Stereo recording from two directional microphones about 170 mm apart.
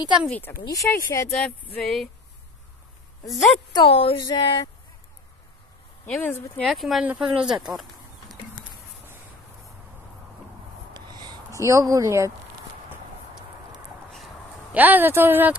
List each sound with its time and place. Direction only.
0.3 s speech: 10° left (ahead or behind)
1.3 s speech: 5° left (ahead or behind)
3.3 s speech: centre (ahead or behind)
3.7 s a woman's voice: 35° left (ahead or behind)
4.2 s a sound: 25° left (ahead or behind)
6.0 s speech: 10° left (ahead or behind)
6.7 s speech: centre (ahead or behind)
10.9 s a sound: 25° right (ahead or behind)
14.1 s a sound: 5° right (ahead or behind)